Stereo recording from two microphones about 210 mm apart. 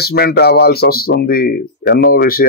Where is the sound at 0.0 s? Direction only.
50° left (ahead or behind).